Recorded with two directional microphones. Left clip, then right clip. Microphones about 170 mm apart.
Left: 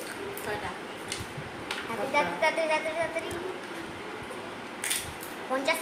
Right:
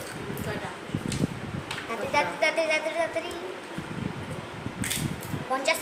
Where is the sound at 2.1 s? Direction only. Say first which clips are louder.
Right 2 dB; 60° right (ahead or behind).